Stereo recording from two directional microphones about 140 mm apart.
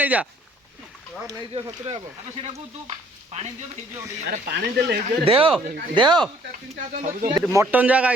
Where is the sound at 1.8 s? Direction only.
50° right (ahead or behind).